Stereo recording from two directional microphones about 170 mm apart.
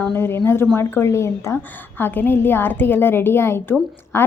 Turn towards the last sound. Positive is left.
turn(degrees=15)  # may be behind; listen again after turning